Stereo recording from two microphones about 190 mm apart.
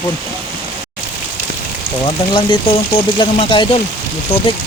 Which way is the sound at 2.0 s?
25° left (ahead or behind).